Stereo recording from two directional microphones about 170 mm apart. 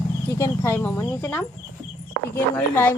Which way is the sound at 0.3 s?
15° left (ahead or behind).